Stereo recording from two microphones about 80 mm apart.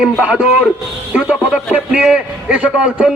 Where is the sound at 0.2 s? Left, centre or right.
Centre.